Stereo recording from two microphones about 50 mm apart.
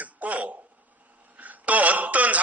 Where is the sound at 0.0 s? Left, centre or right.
Right.